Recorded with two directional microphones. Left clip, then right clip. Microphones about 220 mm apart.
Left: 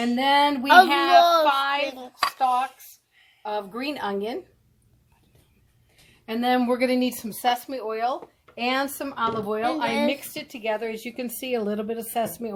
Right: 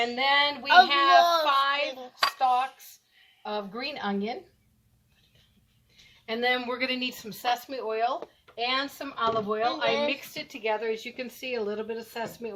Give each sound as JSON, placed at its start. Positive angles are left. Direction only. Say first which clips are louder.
{"t": 0.0, "sound": "speech", "louder": "left 4 dB", "side_deg": 45}
{"t": 6.2, "sound": "speech", "louder": "left 4 dB", "side_deg": 40}